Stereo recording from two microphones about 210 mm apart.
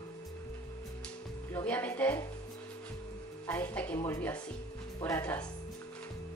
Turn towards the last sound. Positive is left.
turn(degrees=10)  # may be behind; listen again after turning